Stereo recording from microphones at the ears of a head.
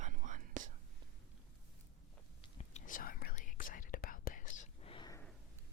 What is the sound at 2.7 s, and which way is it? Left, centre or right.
Whispering, left.